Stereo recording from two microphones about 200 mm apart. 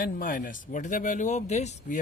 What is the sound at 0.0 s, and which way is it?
Speech, 45° left (ahead or behind).